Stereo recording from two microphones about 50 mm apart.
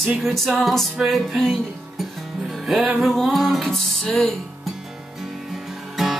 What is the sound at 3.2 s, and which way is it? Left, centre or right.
Music, centre.